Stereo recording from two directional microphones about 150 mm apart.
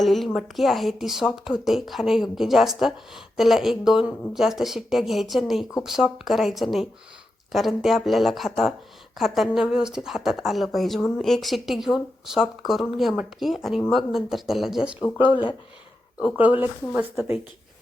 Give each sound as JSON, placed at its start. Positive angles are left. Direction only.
{"t": 0.0, "sound": "a woman's voice", "side_deg": 0}
{"t": 15.2, "sound": "speech", "side_deg": 35}
{"t": 16.4, "sound": "speech", "side_deg": -10}